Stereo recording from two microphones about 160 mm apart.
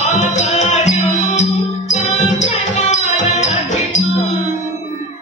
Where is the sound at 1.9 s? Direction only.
50° left (ahead or behind).